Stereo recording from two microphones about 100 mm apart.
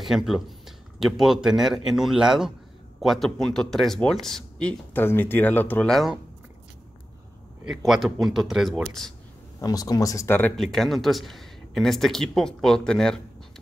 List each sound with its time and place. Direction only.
0.0 s speech: centre (ahead or behind)
4.9 s speech: 20° left (ahead or behind)
5.9 s speech: centre (ahead or behind)
7.7 s speech: centre (ahead or behind)
9.6 s speech: 40° left (ahead or behind)
10.2 s speech: 20° left (ahead or behind)
10.5 s speech: 5° left (ahead or behind)